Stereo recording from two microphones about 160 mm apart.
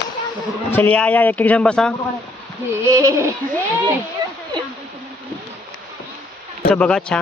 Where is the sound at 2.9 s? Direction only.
20° right (ahead or behind).